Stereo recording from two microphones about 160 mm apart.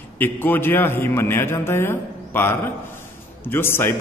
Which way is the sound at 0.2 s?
10° left (ahead or behind).